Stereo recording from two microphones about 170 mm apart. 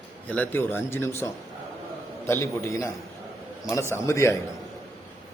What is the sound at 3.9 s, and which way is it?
Speech, 15° left (ahead or behind).